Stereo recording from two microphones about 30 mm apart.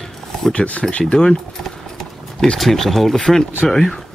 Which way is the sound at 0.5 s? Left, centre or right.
Left.